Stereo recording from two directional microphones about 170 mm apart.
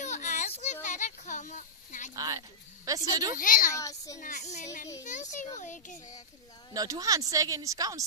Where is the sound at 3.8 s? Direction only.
20° left (ahead or behind).